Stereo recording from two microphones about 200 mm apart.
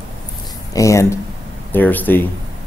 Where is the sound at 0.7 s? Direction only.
15° left (ahead or behind).